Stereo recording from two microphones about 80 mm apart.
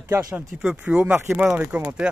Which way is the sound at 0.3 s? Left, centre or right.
Centre.